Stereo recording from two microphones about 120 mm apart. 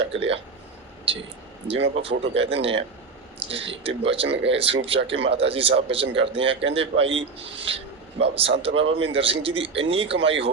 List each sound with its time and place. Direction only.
0.1 s speech: 55° right (ahead or behind)
1.6 s speech: 50° right (ahead or behind)